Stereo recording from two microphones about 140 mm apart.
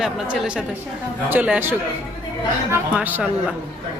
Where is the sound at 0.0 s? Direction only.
5° right (ahead or behind).